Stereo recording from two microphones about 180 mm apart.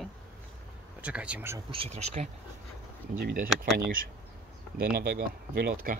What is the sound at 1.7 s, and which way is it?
Speech, 35° right (ahead or behind).